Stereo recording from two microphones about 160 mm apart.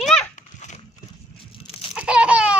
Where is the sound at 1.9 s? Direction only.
5° right (ahead or behind).